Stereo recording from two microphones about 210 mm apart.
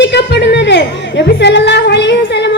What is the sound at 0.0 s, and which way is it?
Music, 55° left (ahead or behind).